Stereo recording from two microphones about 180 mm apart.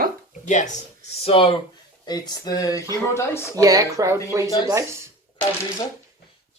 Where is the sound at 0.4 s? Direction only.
45° left (ahead or behind).